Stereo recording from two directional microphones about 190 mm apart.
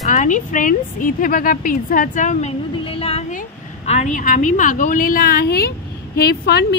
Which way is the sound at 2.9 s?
30° left (ahead or behind).